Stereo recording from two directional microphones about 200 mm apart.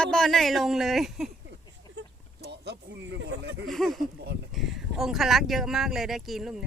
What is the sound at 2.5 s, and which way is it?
Speech, 55° right (ahead or behind).